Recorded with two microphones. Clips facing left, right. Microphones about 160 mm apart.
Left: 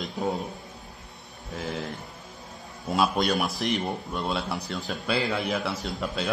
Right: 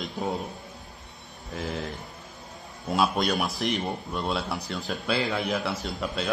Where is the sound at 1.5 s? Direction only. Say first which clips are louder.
Even; centre (ahead or behind).